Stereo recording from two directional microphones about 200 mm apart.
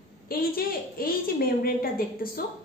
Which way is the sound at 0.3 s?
45° left (ahead or behind).